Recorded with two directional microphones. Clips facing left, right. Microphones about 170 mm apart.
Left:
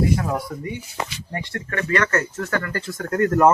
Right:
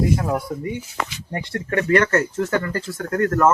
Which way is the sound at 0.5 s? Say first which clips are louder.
Right 4 dB; 15° right (ahead or behind).